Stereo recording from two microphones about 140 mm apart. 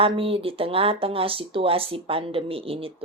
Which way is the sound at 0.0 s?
40° right (ahead or behind).